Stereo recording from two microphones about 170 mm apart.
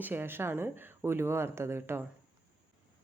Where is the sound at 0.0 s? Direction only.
10° right (ahead or behind).